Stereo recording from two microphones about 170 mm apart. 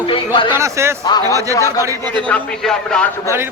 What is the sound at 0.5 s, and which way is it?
Speech, 15° right (ahead or behind).